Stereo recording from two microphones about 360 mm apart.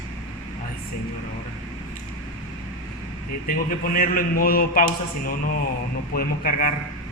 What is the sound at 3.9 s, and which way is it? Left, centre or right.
Speech, left.